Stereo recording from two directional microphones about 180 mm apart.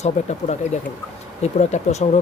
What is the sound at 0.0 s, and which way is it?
Speech, 40° left (ahead or behind).